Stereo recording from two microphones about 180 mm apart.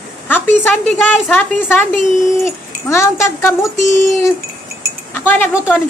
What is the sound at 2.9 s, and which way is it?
Speech, 15° left (ahead or behind).